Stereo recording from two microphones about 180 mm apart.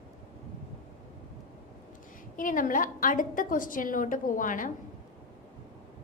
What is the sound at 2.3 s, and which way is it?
A woman's voice, 50° left (ahead or behind).